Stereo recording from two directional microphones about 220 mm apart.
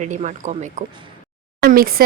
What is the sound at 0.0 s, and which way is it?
Speech, 35° right (ahead or behind).